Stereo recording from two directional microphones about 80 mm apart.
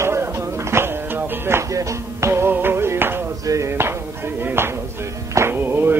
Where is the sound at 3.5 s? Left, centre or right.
Right.